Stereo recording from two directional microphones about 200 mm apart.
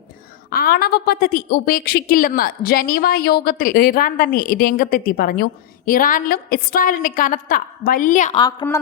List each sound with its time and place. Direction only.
0.5 s a woman's voice: 50° left (ahead or behind)
8.4 s a woman's voice: 20° left (ahead or behind)